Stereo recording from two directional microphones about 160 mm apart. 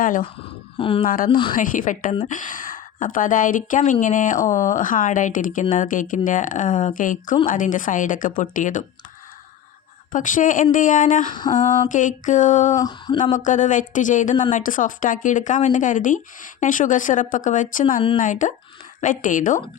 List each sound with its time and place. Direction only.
0.0 s speech: 60° left (ahead or behind)
0.4 s speech: 35° left (ahead or behind)
1.0 s speech: 60° left (ahead or behind)
10.1 s speech: 55° left (ahead or behind)
11.3 s a sound: 30° left (ahead or behind)
11.5 s mantra: 55° left (ahead or behind)
12.8 s a sound: 25° left (ahead or behind)
13.3 s mantra: 50° left (ahead or behind)
14.5 s speech: 55° left (ahead or behind)